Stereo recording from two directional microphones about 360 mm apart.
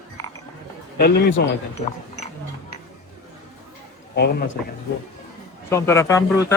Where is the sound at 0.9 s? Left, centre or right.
Left.